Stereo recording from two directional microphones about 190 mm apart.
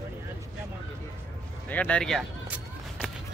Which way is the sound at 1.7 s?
5° left (ahead or behind).